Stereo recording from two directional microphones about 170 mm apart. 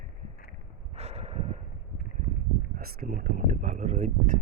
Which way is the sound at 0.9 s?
35° right (ahead or behind).